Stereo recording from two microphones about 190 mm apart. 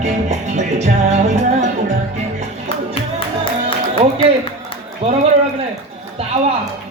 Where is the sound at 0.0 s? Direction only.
35° right (ahead or behind).